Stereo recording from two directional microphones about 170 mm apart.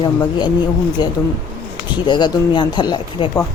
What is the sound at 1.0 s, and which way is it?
A woman's voice, 25° left (ahead or behind).